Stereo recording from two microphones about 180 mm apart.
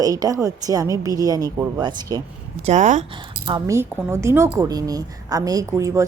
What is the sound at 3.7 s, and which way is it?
A woman's voice, 15° right (ahead or behind).